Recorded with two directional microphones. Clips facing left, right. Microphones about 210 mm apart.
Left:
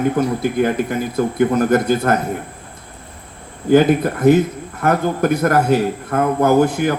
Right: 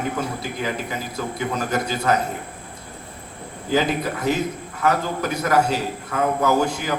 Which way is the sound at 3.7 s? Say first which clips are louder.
Left 9 dB; 55° left (ahead or behind).